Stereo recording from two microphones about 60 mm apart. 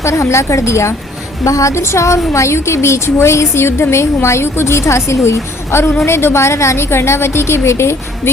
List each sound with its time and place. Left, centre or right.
0.0 s a woman's voice: left
1.5 s a woman's voice: left